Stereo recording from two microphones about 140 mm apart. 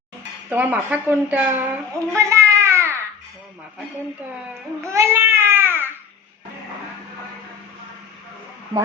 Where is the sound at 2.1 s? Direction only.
20° right (ahead or behind).